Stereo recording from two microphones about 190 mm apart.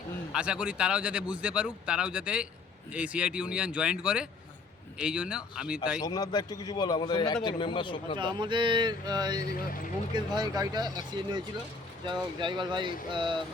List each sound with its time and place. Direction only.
0.3 s speech: 5° right (ahead or behind)
6.0 s a man's voice: 20° left (ahead or behind)
8.2 s speech: 25° right (ahead or behind)
9.5 s speech: 50° left (ahead or behind)
10.2 s speech: 20° right (ahead or behind)